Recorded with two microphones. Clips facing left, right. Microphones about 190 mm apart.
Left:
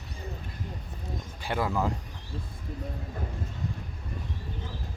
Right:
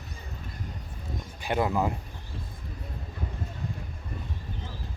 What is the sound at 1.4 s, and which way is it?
Speech, 20° right (ahead or behind).